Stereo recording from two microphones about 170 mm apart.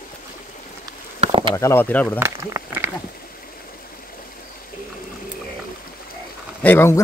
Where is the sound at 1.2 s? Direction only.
30° right (ahead or behind).